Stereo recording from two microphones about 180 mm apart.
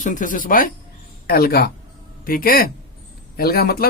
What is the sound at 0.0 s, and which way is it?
Speech, 45° left (ahead or behind).